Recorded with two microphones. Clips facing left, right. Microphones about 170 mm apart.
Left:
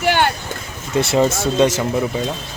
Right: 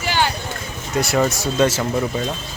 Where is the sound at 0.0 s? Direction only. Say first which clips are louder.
Left 4 dB; 60° left (ahead or behind).